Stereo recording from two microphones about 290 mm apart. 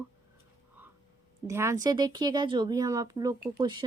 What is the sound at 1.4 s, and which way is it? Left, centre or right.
A woman's voice, centre.